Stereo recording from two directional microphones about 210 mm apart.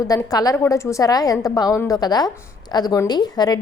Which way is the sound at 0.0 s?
15° left (ahead or behind).